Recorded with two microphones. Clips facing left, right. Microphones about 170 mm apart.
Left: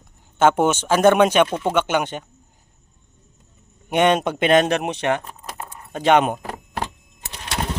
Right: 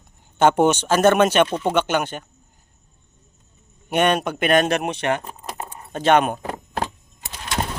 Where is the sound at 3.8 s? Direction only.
20° left (ahead or behind).